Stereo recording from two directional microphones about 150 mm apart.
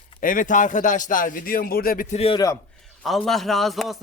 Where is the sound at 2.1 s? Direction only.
40° left (ahead or behind).